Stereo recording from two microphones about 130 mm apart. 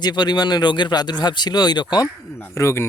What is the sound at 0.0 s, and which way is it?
Speech, 35° left (ahead or behind).